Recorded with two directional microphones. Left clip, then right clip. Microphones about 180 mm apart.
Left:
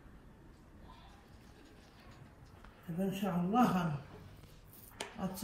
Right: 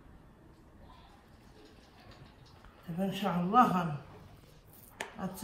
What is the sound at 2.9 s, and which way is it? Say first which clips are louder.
Speech: right 4 dB; 30° left (ahead or behind).